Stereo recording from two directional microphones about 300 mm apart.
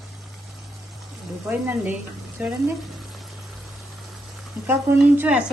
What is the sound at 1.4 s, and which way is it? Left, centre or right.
Speech, centre.